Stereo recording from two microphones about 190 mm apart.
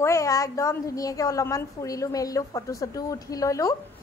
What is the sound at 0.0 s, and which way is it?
A woman's voice, 15° left (ahead or behind).